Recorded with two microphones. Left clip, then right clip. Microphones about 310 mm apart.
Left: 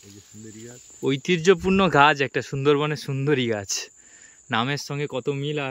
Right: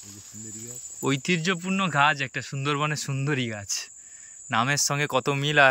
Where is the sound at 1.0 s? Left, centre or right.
Centre.